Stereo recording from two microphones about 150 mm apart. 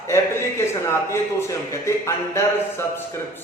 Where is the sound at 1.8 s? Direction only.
20° left (ahead or behind).